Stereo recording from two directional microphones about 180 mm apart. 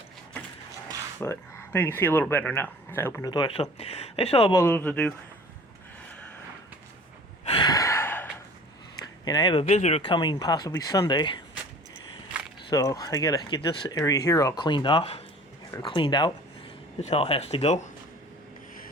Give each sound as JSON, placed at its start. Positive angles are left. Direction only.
{"t": 1.2, "sound": "speech", "side_deg": 15}
{"t": 4.5, "sound": "speech", "side_deg": 10}
{"t": 7.4, "sound": "gasp", "side_deg": 25}
{"t": 9.2, "sound": "speech", "side_deg": 20}
{"t": 9.6, "sound": "speech", "side_deg": 40}
{"t": 12.7, "sound": "speech", "side_deg": 20}
{"t": 17.0, "sound": "speech", "side_deg": 35}